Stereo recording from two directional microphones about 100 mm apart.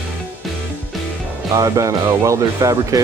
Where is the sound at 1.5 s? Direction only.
30° right (ahead or behind).